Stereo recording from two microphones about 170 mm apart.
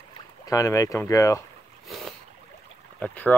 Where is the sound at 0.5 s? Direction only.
20° left (ahead or behind).